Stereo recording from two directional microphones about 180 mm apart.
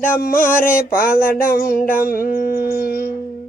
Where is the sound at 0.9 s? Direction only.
55° left (ahead or behind).